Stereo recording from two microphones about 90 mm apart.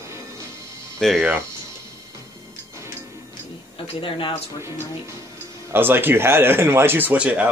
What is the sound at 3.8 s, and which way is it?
Speech, 80° left.